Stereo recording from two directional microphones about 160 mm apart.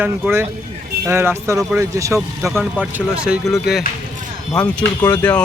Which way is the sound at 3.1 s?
5° right (ahead or behind).